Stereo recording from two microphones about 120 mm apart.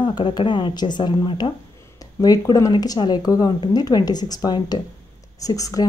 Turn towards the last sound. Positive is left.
turn(degrees=30)  # may be behind; listen again after turning